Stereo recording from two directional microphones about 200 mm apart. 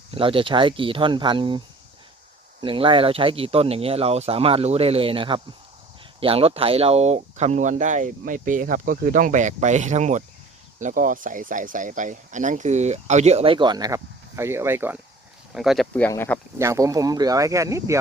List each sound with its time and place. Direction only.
0.1 s speech: 25° right (ahead or behind); by 16.4 s 10° left (ahead or behind)
16.6 s speech: 15° right (ahead or behind)